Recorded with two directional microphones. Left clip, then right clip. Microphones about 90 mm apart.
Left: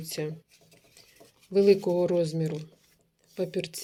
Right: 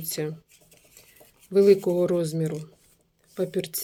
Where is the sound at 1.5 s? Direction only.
30° right (ahead or behind).